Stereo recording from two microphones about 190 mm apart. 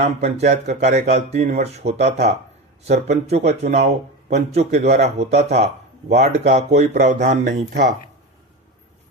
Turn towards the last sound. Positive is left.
turn(degrees=-60)  # may be behind; listen again after turning